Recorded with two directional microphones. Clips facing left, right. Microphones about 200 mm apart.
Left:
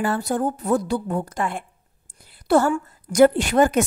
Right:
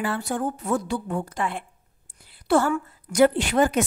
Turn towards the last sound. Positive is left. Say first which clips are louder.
# left 3 dB
turn(degrees=45)  # may be behind; listen again after turning